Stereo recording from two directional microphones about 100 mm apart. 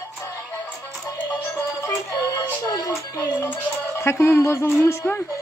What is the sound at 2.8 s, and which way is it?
Music, 35° left (ahead or behind).